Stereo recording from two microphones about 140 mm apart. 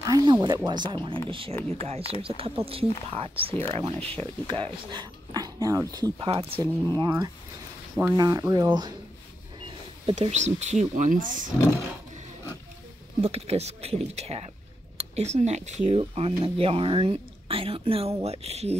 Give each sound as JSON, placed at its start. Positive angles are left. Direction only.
{"t": 0.0, "sound": "speech", "side_deg": -30}
{"t": 1.5, "sound": "speech", "side_deg": 20}
{"t": 1.8, "sound": "speech", "side_deg": -45}
{"t": 7.0, "sound": "speech", "side_deg": -30}
{"t": 10.1, "sound": "speech", "side_deg": -55}
{"t": 13.2, "sound": "speech", "side_deg": -45}
{"t": 16.0, "sound": "speech", "side_deg": -45}